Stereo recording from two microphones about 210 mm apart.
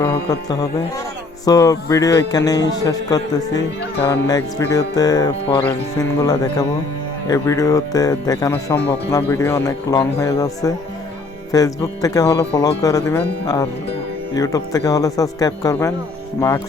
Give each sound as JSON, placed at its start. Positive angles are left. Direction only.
{"t": 0.0, "sound": "speech", "side_deg": 15}